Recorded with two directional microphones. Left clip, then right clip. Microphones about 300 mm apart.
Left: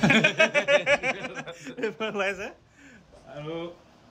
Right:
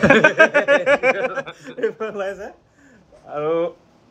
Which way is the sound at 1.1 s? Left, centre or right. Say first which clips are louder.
Right 13 dB; centre.